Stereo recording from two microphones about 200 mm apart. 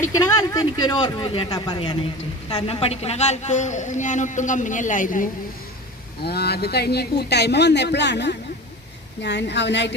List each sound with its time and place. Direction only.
0.0 s a woman's voice: 15° left (ahead or behind); by 5.3 s 40° left (ahead or behind)
6.2 s speech: 55° left (ahead or behind)